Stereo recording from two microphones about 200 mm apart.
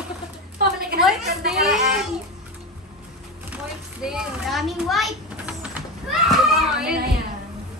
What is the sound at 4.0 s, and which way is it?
A child's voice, 5° right (ahead or behind).